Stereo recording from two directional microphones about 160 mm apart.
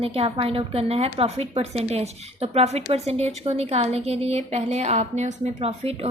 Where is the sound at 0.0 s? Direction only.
35° right (ahead or behind).